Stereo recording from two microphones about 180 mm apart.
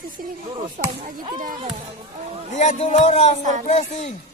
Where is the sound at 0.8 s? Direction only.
50° right (ahead or behind).